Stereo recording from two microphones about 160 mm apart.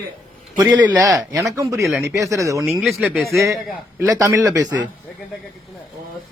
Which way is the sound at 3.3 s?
20° right (ahead or behind).